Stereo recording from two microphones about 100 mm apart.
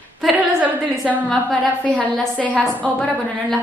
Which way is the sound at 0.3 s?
15° right (ahead or behind).